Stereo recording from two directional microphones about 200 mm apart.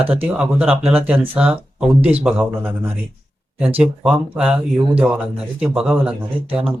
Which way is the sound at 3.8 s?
5° right (ahead or behind).